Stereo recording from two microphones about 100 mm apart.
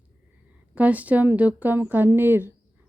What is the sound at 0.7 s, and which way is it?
Speech, 15° right (ahead or behind).